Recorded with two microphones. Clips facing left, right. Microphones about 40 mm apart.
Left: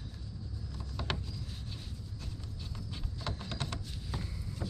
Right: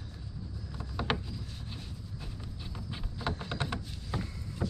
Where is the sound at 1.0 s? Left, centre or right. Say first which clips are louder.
Right 5 dB; centre.